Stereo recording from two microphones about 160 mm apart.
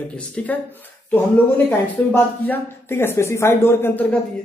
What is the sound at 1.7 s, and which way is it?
A woman's voice, 10° left (ahead or behind).